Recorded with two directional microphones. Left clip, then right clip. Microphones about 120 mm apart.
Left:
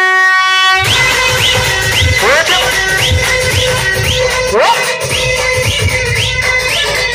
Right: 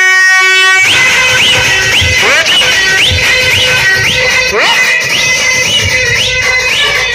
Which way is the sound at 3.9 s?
50° left (ahead or behind).